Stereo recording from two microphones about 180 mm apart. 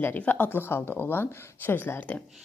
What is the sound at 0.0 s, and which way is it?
Speech, 10° left (ahead or behind).